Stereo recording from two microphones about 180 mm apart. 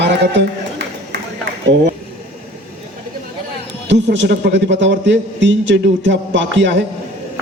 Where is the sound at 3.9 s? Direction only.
90° right.